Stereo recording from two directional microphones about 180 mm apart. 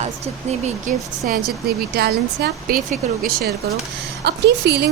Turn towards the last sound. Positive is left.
turn(degrees=-70)  # may be behind; listen again after turning